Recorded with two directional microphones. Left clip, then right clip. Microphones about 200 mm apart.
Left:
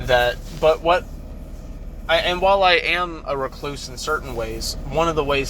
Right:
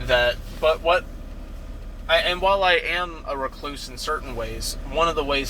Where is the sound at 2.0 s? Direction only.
15° left (ahead or behind).